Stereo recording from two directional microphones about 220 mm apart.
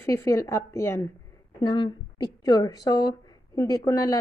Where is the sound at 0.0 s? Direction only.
10° left (ahead or behind).